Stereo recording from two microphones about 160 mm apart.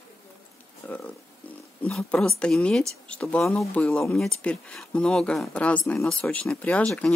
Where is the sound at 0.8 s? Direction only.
10° left (ahead or behind).